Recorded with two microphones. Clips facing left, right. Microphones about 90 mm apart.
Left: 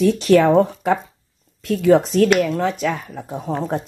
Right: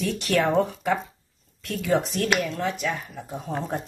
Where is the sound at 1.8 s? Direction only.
50° left (ahead or behind).